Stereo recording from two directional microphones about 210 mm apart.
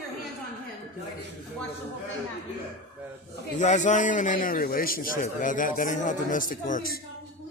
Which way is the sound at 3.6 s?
35° left (ahead or behind).